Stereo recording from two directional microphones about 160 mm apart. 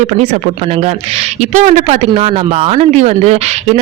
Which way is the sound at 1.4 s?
45° right (ahead or behind).